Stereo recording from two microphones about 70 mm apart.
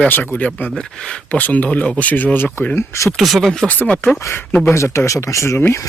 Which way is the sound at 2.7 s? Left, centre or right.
Left.